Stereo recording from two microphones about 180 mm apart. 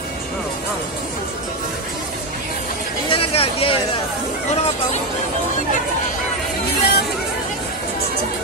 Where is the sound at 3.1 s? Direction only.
30° left (ahead or behind).